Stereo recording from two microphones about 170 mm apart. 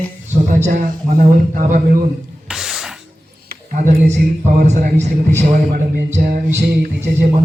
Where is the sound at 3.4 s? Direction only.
50° right (ahead or behind).